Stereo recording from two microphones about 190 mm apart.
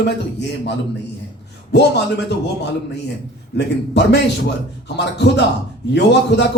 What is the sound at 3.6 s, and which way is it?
A man's voice, 65° left (ahead or behind).